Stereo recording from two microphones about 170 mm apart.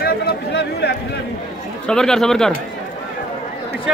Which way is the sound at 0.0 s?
70° left (ahead or behind).